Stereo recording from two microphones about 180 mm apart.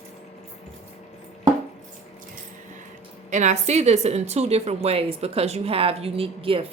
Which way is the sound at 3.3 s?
40° right (ahead or behind).